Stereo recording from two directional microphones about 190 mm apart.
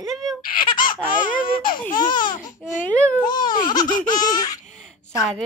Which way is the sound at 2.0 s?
25° left (ahead or behind).